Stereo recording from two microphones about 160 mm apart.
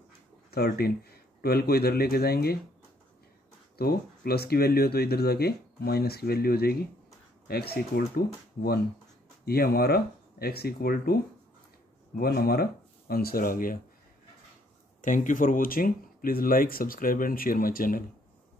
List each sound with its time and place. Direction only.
0.5 s speech: 75° left (ahead or behind)
3.7 s speech: 75° left (ahead or behind)
9.4 s speech: 75° left (ahead or behind)
12.2 s speech: 70° left (ahead or behind)
15.0 s speech: 55° left (ahead or behind)